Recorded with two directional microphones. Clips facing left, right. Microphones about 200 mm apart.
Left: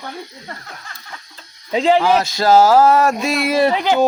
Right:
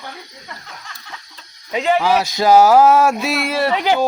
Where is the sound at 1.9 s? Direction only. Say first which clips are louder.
Left 1 dB; 5° right (ahead or behind).